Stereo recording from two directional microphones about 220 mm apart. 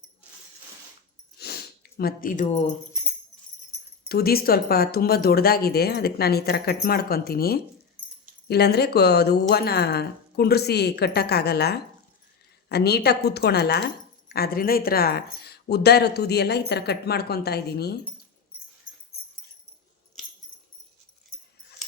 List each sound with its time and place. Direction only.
1.4 s sniff: 45° left (ahead or behind)
4.1 s speech: 45° left (ahead or behind)
18.9 s dog: 40° left (ahead or behind)